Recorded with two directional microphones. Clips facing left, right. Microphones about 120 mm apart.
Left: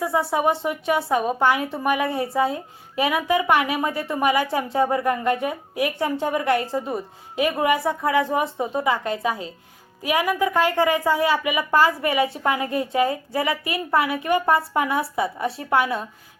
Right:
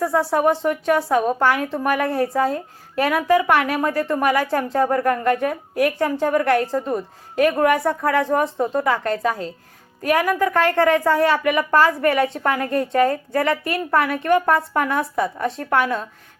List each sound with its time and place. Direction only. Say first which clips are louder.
0.0 s speech: right 3 dB; centre (ahead or behind)